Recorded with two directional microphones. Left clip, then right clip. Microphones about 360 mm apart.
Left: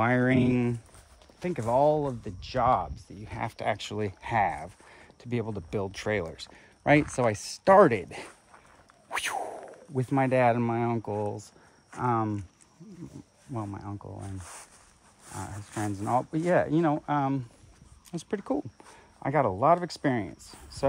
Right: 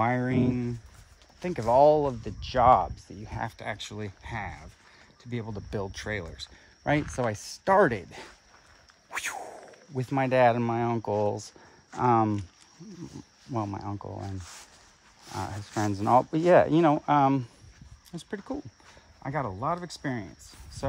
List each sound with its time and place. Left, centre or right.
0.0 s speech: centre
1.4 s speech: centre
3.3 s speech: centre; by 12.4 s right
13.5 s speech: right
15.3 s speech: right
18.1 s speech: centre